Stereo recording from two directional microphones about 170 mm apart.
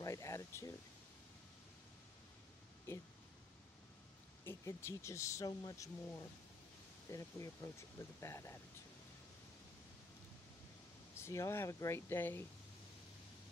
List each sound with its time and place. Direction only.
0.0 s speech: 15° left (ahead or behind)
2.9 s speech: 15° left (ahead or behind)
4.5 s speech: 15° left (ahead or behind)
11.1 s speech: 15° left (ahead or behind)